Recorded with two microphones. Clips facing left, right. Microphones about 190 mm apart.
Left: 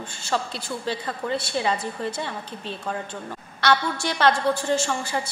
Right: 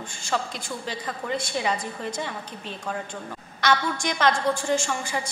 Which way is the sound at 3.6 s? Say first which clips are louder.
Left 1 dB; 10° right (ahead or behind).